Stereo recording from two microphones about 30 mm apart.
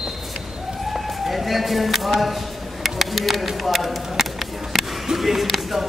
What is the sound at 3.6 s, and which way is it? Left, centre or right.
Speech, centre.